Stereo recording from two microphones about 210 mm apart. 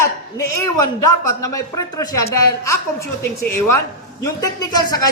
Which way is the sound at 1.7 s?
15° left (ahead or behind).